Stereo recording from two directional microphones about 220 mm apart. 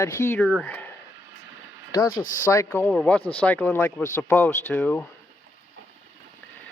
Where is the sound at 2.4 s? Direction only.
10° left (ahead or behind).